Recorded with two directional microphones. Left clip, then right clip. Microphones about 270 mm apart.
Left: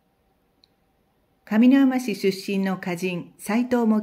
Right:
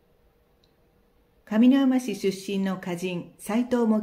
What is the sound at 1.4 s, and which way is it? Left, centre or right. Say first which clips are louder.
Speech: left 3 dB; left.